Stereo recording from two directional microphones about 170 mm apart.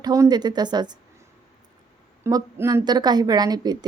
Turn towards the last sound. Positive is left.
turn(degrees=-25)  # may be behind; listen again after turning